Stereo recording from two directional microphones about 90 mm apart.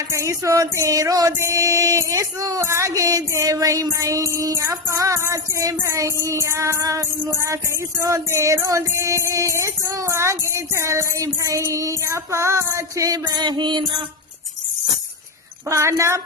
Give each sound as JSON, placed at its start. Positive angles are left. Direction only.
{"t": 0.1, "sound": "music", "side_deg": -35}
{"t": 15.7, "sound": "music", "side_deg": -30}